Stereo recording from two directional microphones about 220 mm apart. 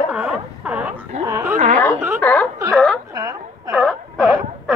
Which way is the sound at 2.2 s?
5° left (ahead or behind).